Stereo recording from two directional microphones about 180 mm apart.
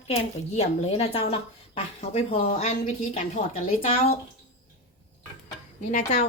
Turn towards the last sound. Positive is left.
turn(degrees=40)  # may be behind; listen again after turning